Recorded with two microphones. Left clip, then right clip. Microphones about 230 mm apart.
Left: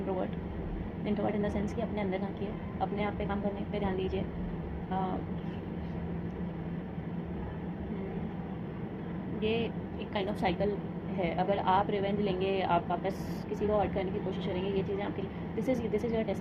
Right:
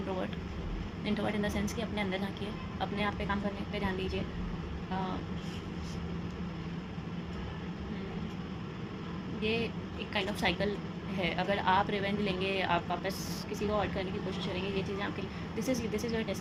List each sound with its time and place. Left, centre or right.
1.0 s speech: right
9.4 s speech: right